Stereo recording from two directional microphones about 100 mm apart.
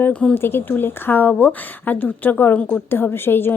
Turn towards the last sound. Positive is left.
turn(degrees=20)  # may be behind; listen again after turning